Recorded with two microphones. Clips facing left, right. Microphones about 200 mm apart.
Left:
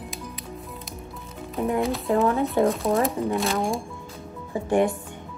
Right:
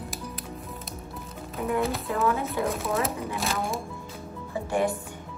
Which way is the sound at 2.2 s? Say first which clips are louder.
Left 5 dB; centre (ahead or behind).